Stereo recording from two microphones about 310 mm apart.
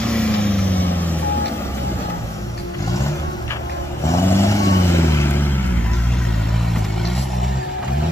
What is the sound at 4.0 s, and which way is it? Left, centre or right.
Vehicle, centre.